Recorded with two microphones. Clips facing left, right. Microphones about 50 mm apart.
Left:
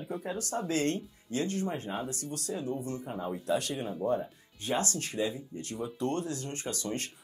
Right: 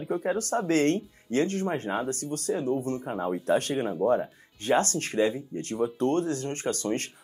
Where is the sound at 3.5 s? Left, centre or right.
Right.